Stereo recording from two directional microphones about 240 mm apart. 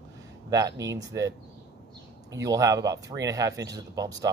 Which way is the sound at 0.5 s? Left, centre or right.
Centre.